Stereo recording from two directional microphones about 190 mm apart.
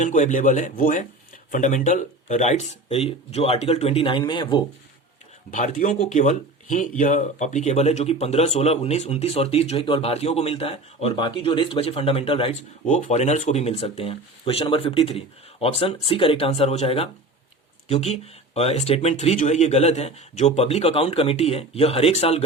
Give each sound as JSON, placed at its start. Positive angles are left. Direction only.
{"t": 0.0, "sound": "speech", "side_deg": 40}
{"t": 5.5, "sound": "speech", "side_deg": 45}
{"t": 12.8, "sound": "speech", "side_deg": 40}